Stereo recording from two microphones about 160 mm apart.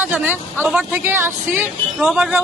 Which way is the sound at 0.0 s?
10° right (ahead or behind).